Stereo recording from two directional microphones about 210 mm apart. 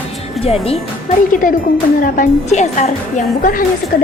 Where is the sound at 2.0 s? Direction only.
40° left (ahead or behind).